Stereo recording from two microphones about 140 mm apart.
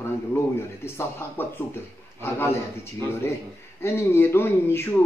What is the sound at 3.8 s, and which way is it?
A man's voice, 20° left (ahead or behind).